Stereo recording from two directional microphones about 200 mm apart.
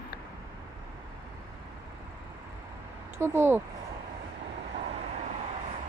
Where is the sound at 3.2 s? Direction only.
10° right (ahead or behind).